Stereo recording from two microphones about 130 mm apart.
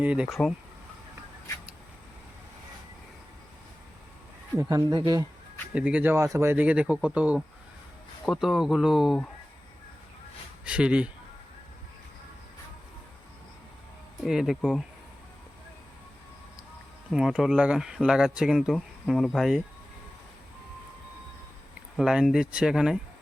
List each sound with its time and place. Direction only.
0.0 s speech: 10° right (ahead or behind)
4.7 s speech: 35° right (ahead or behind)
5.7 s speech: 10° right (ahead or behind)
10.6 s speech: 10° right (ahead or behind)
14.3 s speech: 5° right (ahead or behind)
17.1 s speech: 5° right (ahead or behind)
21.9 s speech: 5° right (ahead or behind)